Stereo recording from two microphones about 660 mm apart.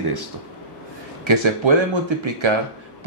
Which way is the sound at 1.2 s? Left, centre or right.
Right.